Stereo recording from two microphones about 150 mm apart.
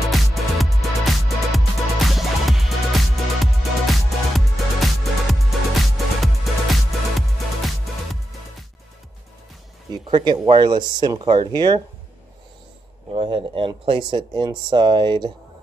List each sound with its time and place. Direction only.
0.1 s music: centre (ahead or behind)
9.9 s speech: 30° right (ahead or behind)
13.1 s speech: 40° right (ahead or behind)